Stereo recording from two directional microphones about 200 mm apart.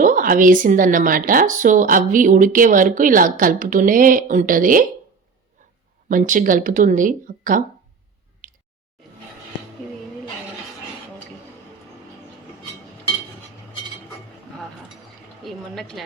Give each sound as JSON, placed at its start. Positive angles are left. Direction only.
{"t": 0.0, "sound": "speech", "side_deg": -45}
{"t": 6.1, "sound": "speech", "side_deg": -40}
{"t": 8.4, "sound": "squish", "side_deg": -40}
{"t": 15.4, "sound": "a sound", "side_deg": 0}